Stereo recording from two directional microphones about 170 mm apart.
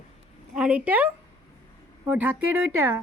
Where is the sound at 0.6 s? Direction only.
5° right (ahead or behind).